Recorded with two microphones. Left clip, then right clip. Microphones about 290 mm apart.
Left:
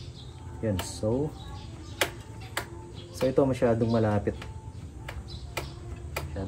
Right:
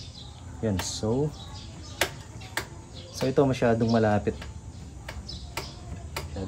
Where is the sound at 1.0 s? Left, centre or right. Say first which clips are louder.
Left 1 dB; centre.